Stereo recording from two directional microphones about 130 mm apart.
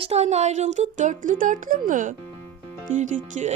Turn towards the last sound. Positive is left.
turn(degrees=-80)